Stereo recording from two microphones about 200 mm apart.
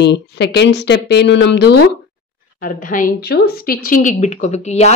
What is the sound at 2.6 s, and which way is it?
Speech, 45° left (ahead or behind).